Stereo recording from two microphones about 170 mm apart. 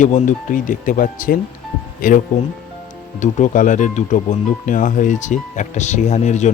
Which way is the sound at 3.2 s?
50° left (ahead or behind).